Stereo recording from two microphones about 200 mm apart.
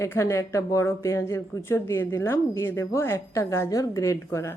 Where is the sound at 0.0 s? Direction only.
15° left (ahead or behind).